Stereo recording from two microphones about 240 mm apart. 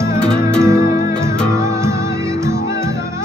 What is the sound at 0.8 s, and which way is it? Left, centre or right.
Music, left.